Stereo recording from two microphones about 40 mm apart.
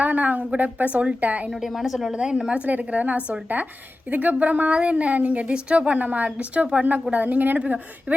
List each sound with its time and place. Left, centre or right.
0.0 s a woman's voice: right
1.6 s a woman's voice: centre
2.1 s a woman's voice: centre
2.6 s a woman's voice: right